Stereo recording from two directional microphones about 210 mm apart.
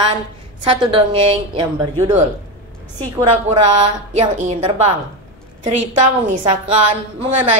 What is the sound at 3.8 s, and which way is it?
A woman's voice, 30° right (ahead or behind).